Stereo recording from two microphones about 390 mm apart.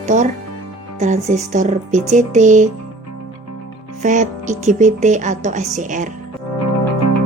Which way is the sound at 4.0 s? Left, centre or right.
Centre.